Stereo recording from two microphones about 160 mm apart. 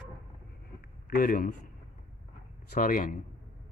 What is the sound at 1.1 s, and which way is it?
Speech, 65° left (ahead or behind).